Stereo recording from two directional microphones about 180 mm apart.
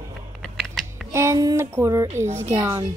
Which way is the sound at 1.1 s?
15° right (ahead or behind).